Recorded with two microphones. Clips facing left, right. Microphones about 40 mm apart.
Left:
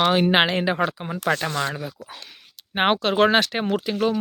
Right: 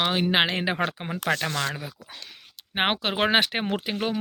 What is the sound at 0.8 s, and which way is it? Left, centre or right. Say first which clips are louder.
Speech: left 3 dB; right.